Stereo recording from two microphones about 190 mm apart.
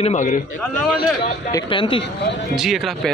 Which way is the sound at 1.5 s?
25° left (ahead or behind).